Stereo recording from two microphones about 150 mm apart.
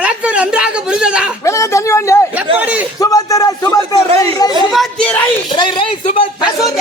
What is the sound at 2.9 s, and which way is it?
Speech, 25° left (ahead or behind).